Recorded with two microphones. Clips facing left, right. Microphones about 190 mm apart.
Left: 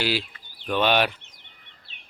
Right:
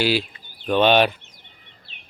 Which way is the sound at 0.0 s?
15° right (ahead or behind).